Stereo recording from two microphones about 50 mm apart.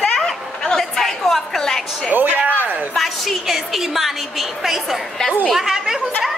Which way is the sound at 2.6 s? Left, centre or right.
Right.